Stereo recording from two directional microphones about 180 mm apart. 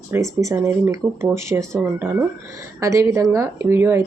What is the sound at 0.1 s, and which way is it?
Speech, 15° right (ahead or behind).